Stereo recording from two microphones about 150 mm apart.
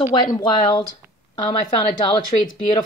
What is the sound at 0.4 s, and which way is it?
Speech, 30° left (ahead or behind).